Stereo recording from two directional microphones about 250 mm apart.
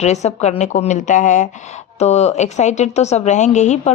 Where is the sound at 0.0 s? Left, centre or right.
Left.